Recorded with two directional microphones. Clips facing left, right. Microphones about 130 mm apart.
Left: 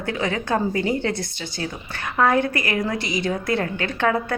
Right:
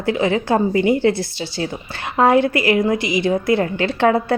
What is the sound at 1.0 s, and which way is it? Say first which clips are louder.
Speech: right 8 dB; 55° left (ahead or behind).